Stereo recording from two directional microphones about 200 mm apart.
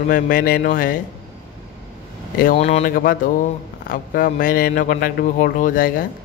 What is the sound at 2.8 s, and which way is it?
A man's voice, 45° left (ahead or behind).